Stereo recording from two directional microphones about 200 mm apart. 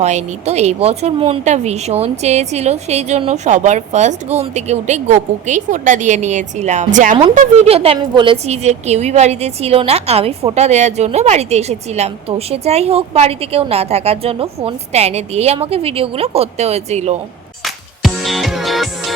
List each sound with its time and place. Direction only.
0.0 s speech: 35° right (ahead or behind)
17.6 s music: centre (ahead or behind)